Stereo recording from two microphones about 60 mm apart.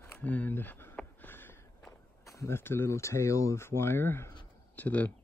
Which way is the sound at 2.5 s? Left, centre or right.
Left.